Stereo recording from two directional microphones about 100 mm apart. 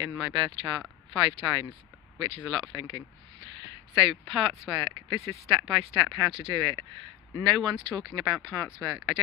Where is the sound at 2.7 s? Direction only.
40° right (ahead or behind).